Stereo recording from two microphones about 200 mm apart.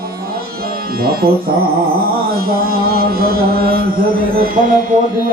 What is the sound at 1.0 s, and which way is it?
Music, 50° right (ahead or behind).